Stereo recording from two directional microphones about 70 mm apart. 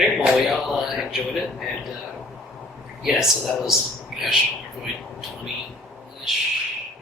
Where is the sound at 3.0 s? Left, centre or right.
Centre.